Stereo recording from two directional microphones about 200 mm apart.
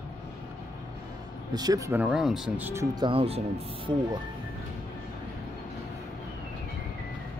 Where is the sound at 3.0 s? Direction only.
30° right (ahead or behind).